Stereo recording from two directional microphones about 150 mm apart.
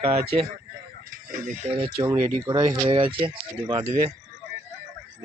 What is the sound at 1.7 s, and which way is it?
Speech, 40° right (ahead or behind).